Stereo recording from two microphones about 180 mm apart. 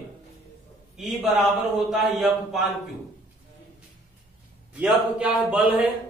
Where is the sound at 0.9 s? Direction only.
Centre (ahead or behind).